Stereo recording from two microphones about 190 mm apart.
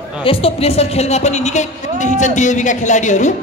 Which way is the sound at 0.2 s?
30° left (ahead or behind).